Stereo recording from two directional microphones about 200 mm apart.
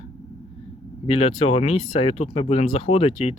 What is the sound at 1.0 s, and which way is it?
Speech, 30° left (ahead or behind).